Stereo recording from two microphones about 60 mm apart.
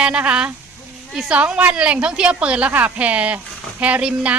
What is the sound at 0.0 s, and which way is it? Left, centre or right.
Speech, centre.